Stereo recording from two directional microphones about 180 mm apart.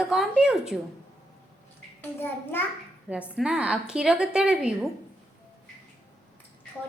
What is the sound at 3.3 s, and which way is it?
A woman's voice, 5° right (ahead or behind).